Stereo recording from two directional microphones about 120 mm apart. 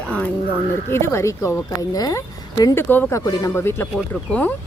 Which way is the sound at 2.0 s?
30° left (ahead or behind).